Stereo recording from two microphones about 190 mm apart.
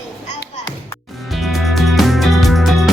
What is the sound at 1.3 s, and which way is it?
Music, centre (ahead or behind).